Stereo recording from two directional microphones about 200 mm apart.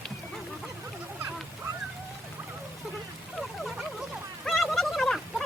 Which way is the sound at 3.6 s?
Centre (ahead or behind).